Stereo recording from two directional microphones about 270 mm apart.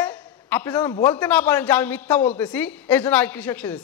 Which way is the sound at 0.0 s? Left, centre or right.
Centre.